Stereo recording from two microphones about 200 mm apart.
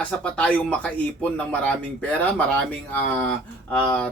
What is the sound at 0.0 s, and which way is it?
Speech, 5° left (ahead or behind).